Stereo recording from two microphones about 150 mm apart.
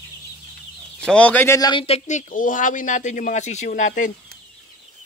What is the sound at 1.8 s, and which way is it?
Speech, 45° left (ahead or behind).